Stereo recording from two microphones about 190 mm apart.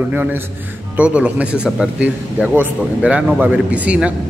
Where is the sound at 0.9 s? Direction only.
5° right (ahead or behind).